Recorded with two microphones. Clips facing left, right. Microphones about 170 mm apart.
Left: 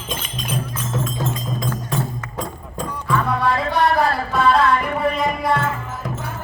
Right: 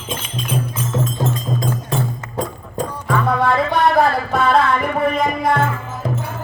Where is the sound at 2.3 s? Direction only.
35° right (ahead or behind).